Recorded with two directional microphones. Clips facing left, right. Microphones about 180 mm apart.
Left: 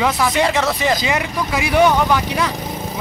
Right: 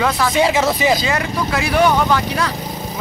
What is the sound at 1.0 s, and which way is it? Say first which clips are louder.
Speech: right 1 dB; 15° left (ahead or behind).